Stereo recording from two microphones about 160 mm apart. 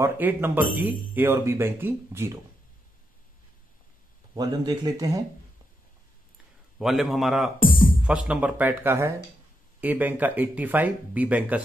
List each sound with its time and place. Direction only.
0.0 s speech: 10° right (ahead or behind)
4.4 s speech: 20° right (ahead or behind)
6.8 s a man's voice: centre (ahead or behind)
7.5 s speech: 60° left (ahead or behind)
8.0 s speech: 5° right (ahead or behind)